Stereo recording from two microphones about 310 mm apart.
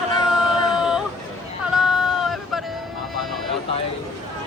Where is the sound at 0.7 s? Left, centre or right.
Centre.